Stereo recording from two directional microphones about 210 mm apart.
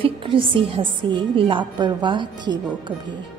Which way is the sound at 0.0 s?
25° right (ahead or behind).